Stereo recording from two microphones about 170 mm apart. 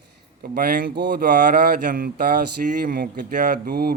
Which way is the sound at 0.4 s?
55° right (ahead or behind).